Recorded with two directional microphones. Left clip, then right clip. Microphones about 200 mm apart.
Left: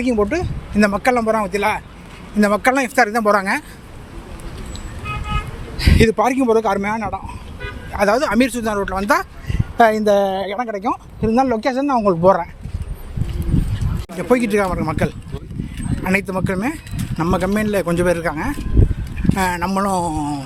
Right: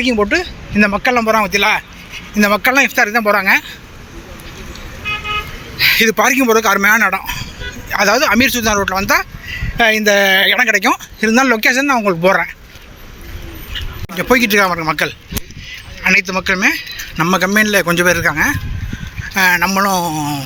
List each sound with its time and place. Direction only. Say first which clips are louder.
0.0 s speech: right 4 dB; 5° left (ahead or behind)
5.7 s speech: right 5 dB; 15° left (ahead or behind)
9.0 s a sound: right 3 dB; 20° left (ahead or behind)
9.9 s speech: right 5 dB; 15° left (ahead or behind)
10.5 s speech: right 11 dB; 15° right (ahead or behind)
10.8 s speech: right 8 dB; centre (ahead or behind)
14.2 s speech: right 5 dB; centre (ahead or behind)
16.1 s speech: right 5 dB; 15° left (ahead or behind)